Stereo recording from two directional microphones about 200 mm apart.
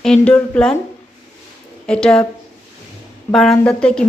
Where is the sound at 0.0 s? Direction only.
5° left (ahead or behind).